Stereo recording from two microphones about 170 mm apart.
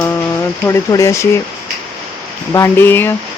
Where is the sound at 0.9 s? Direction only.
20° left (ahead or behind).